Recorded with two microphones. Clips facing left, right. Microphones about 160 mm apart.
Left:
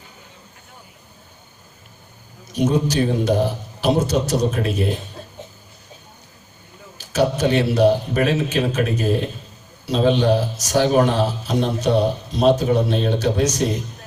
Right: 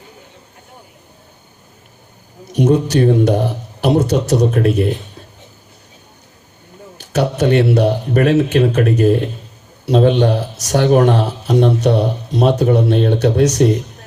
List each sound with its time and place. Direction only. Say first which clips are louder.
2.5 s speech: right 5 dB; 65° right (ahead or behind)
7.0 s speech: right 2 dB; 65° right (ahead or behind)